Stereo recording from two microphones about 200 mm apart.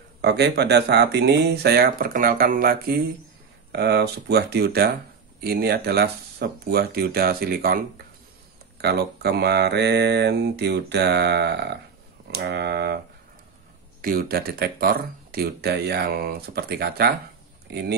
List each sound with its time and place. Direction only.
0.2 s speech: 55° right (ahead or behind)
8.8 s speech: 55° right (ahead or behind)
14.0 s speech: 50° right (ahead or behind)